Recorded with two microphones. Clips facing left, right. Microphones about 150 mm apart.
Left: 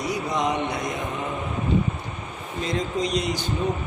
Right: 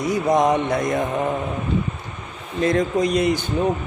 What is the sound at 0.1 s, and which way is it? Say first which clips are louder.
Speech: right 9 dB; 50° right (ahead or behind).